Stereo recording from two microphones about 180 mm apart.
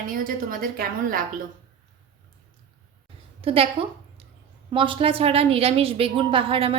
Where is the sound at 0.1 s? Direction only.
50° right (ahead or behind).